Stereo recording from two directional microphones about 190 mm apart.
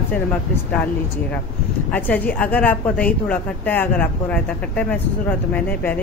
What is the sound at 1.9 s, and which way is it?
A woman's voice, 10° left (ahead or behind).